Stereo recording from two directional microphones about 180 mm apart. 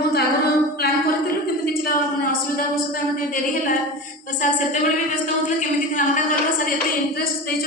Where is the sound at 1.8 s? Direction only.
50° left (ahead or behind).